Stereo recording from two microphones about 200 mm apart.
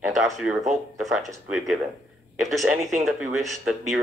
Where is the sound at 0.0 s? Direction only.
Centre (ahead or behind).